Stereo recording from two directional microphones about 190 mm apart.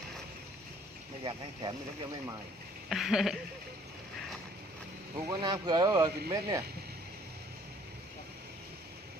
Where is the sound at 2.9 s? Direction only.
Centre (ahead or behind).